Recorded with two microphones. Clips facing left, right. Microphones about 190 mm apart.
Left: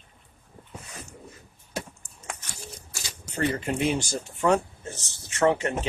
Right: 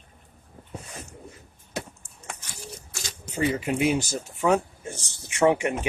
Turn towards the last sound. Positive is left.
turn(degrees=-15)  # may be behind; listen again after turning